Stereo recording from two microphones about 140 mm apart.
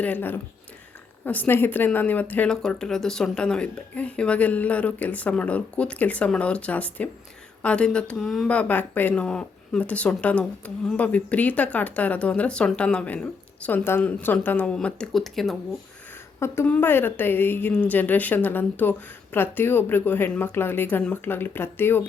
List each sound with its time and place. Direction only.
0.0 s speech: 10° left (ahead or behind)
16.4 s a woman's voice: 20° left (ahead or behind)